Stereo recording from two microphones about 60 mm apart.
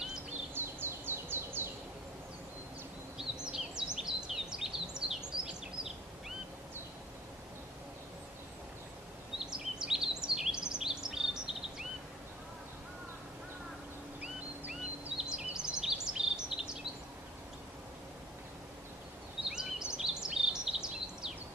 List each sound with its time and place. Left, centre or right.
0.6 s bird: right
3.2 s a sound: centre
9.4 s bird vocalization: centre
14.7 s bird vocalization: centre
19.5 s bird vocalization: centre